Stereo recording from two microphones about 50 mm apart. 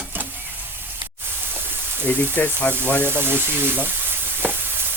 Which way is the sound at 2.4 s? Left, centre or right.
Left.